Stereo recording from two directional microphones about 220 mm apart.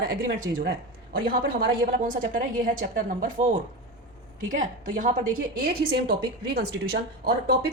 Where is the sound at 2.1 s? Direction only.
40° right (ahead or behind).